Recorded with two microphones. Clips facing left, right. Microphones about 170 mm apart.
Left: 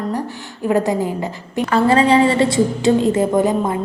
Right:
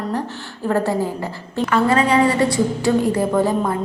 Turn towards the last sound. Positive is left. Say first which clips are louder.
# left 2 dB
turn(degrees=20)  # may be behind; listen again after turning